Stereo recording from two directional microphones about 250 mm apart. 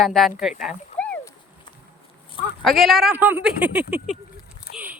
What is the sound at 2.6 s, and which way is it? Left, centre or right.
Speech, centre.